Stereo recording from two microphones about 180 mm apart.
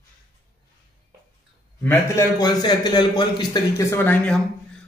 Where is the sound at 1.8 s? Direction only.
10° left (ahead or behind).